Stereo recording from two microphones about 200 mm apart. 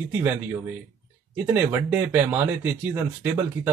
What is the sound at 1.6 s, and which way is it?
A man's voice, 10° right (ahead or behind).